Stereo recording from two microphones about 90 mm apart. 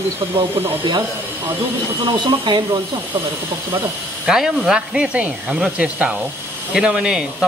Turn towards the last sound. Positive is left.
turn(degrees=-10)  # may be behind; listen again after turning